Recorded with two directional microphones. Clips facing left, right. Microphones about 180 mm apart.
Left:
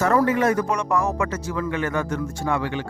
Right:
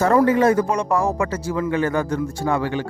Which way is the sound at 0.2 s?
30° right (ahead or behind).